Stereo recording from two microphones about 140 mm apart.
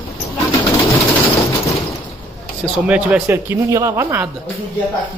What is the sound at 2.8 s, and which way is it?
Speech, 10° right (ahead or behind).